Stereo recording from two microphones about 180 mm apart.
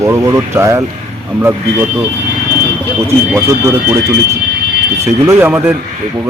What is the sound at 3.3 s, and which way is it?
Speech, 15° right (ahead or behind).